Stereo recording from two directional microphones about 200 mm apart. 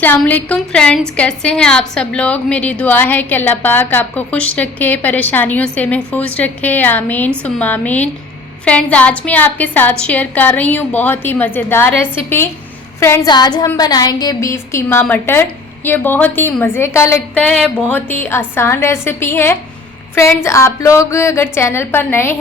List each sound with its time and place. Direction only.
0.0 s a woman's voice: 10° left (ahead or behind)